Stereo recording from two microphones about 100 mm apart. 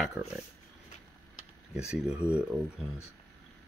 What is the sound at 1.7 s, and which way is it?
Speech, 5° right (ahead or behind).